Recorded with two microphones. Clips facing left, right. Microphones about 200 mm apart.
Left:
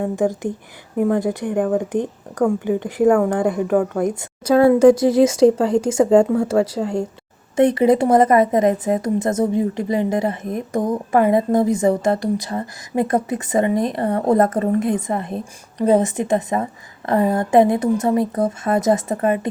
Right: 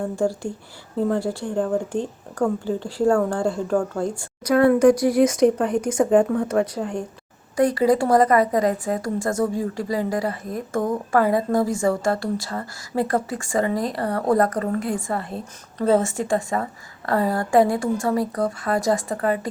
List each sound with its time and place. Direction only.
0.2 s a woman's voice: 20° left (ahead or behind)